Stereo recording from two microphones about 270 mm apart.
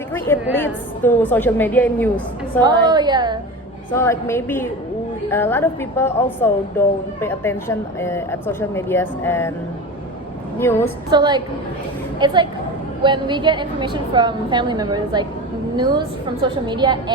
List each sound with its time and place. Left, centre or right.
0.5 s speech: centre
2.6 s a woman's voice: centre
3.9 s speech: centre
10.6 s speech: centre
11.1 s a woman's voice: centre